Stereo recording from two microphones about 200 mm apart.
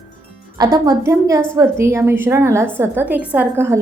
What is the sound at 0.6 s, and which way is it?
A woman's voice, 20° right (ahead or behind).